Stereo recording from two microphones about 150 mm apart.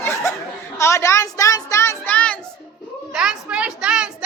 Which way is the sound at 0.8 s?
20° left (ahead or behind).